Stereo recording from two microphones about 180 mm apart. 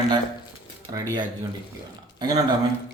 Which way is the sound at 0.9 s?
25° right (ahead or behind).